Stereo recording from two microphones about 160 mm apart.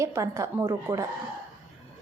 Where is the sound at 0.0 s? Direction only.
20° right (ahead or behind).